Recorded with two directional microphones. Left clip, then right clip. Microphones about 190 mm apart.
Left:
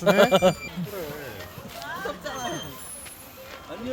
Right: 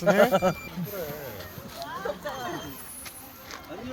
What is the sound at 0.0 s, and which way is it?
Speech, 45° left (ahead or behind).